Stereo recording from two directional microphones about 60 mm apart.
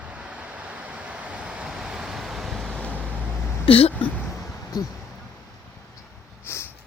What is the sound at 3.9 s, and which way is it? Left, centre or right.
Speech, left.